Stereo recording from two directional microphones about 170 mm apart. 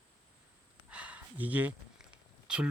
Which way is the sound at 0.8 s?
5° right (ahead or behind).